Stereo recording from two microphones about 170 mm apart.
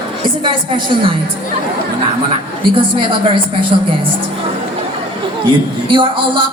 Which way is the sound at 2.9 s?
30° right (ahead or behind).